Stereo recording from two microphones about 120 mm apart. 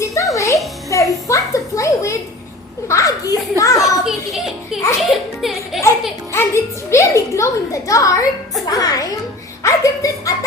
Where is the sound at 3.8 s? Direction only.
Centre (ahead or behind).